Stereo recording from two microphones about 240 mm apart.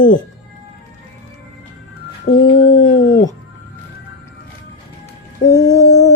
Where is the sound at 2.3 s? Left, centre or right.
Left.